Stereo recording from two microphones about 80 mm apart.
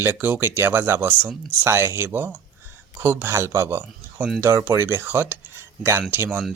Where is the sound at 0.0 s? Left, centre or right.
Right.